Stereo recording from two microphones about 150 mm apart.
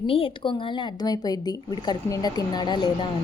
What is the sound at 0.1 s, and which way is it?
A woman's voice, 35° left (ahead or behind).